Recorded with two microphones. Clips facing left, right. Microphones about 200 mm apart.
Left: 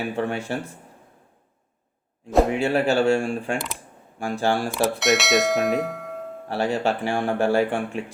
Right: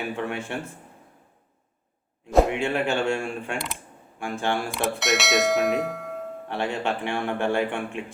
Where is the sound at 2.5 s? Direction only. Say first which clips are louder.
Left 4 dB; 35° left (ahead or behind).